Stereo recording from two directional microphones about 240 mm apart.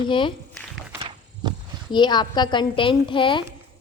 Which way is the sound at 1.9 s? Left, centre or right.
Centre.